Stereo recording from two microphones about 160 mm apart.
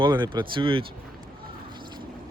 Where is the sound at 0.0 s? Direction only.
25° right (ahead or behind).